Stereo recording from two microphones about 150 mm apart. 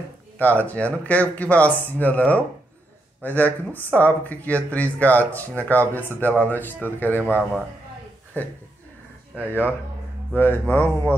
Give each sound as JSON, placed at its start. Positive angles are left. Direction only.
{"t": 0.4, "sound": "speech", "side_deg": 10}